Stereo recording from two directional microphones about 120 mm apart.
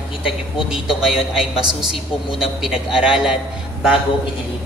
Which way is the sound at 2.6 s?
5° right (ahead or behind).